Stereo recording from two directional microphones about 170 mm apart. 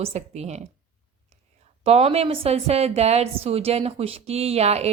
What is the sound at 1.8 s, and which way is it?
A woman's voice, 35° right (ahead or behind).